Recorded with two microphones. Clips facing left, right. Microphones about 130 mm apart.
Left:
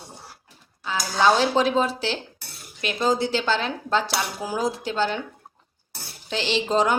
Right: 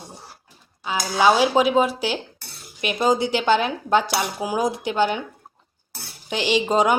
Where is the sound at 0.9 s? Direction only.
10° right (ahead or behind).